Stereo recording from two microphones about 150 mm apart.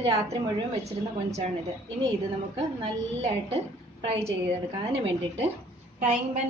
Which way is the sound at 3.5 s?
40° right (ahead or behind).